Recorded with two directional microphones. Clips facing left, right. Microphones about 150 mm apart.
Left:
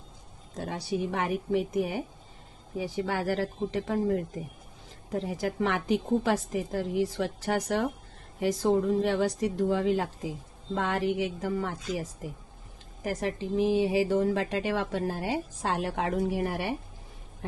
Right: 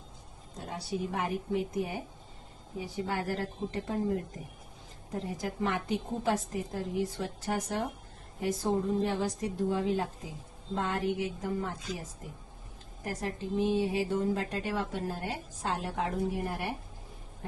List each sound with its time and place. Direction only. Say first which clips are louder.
0.6 s speech: left 4 dB; 85° left
5.2 s speech: left 3 dB; 90° left
9.0 s speech: left 5 dB; 80° left
13.1 s speech: left 5 dB; 90° left